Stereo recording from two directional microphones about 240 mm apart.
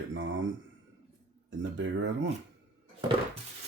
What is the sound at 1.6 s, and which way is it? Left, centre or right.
Speech, right.